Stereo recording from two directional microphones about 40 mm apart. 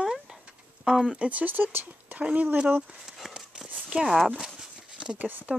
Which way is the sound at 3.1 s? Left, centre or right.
Centre.